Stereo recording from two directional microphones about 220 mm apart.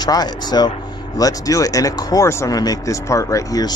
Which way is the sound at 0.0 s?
20° left (ahead or behind).